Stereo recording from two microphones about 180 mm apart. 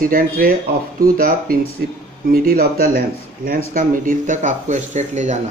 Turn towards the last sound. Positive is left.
turn(degrees=-40)  # may be behind; listen again after turning